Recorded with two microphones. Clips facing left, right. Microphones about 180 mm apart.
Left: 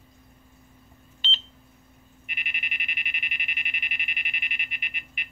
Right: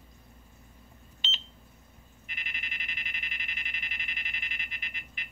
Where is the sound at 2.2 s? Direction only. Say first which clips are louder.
Left 4 dB; 20° left (ahead or behind).